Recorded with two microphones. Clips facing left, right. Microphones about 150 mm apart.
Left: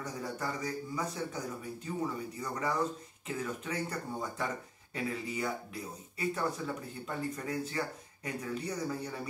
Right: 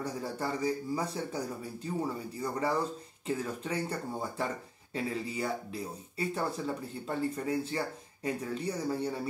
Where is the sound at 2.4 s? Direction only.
30° right (ahead or behind).